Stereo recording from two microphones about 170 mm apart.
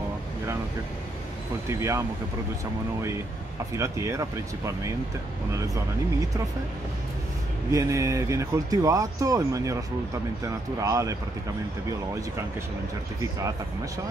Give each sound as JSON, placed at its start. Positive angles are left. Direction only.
{"t": 1.7, "sound": "speech", "side_deg": -15}
{"t": 3.7, "sound": "speech", "side_deg": -15}
{"t": 7.7, "sound": "speech", "side_deg": -20}